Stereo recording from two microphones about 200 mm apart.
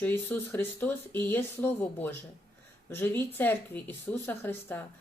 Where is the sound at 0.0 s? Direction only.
10° left (ahead or behind).